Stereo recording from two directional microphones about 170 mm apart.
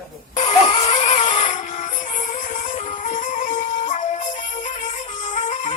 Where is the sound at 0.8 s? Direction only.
40° left (ahead or behind).